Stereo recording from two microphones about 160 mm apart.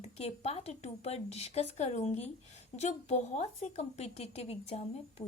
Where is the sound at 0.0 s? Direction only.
40° left (ahead or behind).